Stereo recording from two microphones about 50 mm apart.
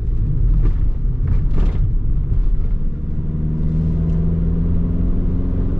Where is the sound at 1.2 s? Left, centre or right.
Centre.